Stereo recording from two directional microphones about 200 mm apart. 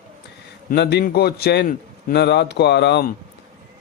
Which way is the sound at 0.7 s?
55° left (ahead or behind).